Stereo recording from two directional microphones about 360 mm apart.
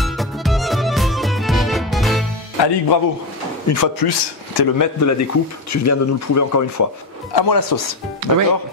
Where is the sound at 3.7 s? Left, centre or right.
Left.